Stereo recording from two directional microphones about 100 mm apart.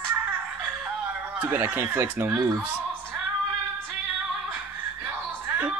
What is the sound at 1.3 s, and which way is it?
Speech, 15° right (ahead or behind).